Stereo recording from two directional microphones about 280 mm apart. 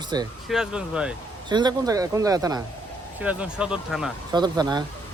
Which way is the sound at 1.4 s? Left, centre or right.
Centre.